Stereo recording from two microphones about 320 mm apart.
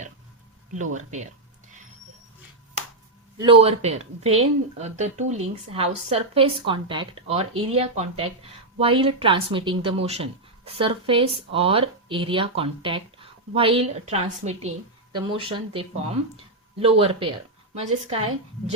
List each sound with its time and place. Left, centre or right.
0.7 s speech: right
3.3 s speech: centre